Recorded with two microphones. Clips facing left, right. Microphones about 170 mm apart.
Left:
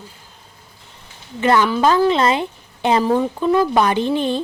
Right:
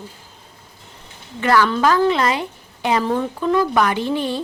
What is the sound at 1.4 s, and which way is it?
Speech, 25° left (ahead or behind).